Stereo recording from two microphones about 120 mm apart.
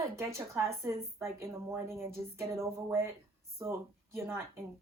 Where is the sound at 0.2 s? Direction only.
25° right (ahead or behind).